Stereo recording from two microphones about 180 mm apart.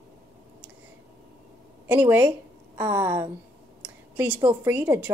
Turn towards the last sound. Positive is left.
turn(degrees=-10)  # may be behind; listen again after turning